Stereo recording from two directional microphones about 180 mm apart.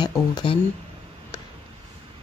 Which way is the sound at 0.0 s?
25° left (ahead or behind).